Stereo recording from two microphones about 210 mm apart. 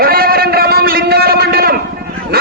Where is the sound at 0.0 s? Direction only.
45° right (ahead or behind).